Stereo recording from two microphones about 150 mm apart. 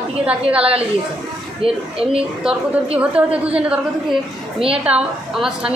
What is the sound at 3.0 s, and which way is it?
Speech, 10° right (ahead or behind).